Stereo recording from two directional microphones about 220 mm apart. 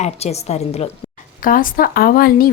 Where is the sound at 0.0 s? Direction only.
30° left (ahead or behind).